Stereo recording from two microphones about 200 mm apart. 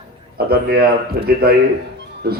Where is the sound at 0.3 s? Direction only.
50° right (ahead or behind).